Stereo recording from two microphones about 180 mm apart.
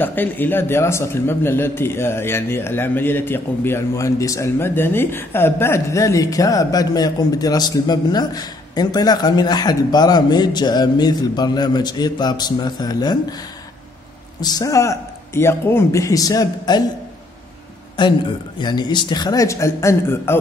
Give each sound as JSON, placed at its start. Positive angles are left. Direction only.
{"t": 0.0, "sound": "a man's voice", "side_deg": 10}
{"t": 14.4, "sound": "a man's voice", "side_deg": 20}
{"t": 18.0, "sound": "a man's voice", "side_deg": 25}